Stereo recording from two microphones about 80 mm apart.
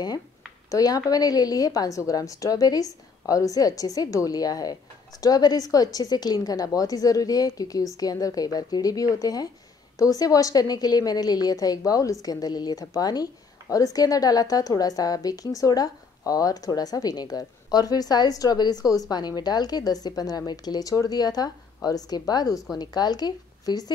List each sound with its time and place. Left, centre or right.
0.7 s a woman's voice: left